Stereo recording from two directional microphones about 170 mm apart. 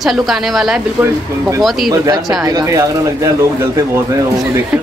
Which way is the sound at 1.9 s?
20° right (ahead or behind).